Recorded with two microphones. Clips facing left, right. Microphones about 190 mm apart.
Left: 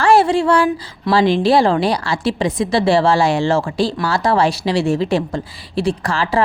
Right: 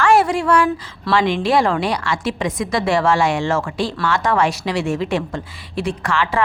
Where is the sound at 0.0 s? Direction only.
30° left (ahead or behind).